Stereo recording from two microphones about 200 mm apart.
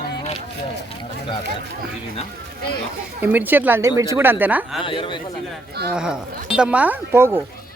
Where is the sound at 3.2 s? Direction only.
10° right (ahead or behind).